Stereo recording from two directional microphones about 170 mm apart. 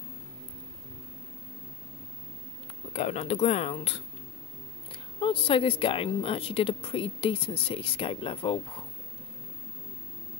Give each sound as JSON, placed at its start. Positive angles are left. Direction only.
{"t": 2.9, "sound": "speech", "side_deg": 40}